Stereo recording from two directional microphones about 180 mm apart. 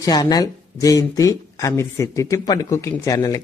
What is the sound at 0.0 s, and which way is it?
Speech, 20° left (ahead or behind).